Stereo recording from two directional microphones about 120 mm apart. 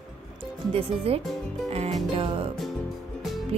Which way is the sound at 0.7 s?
55° right (ahead or behind).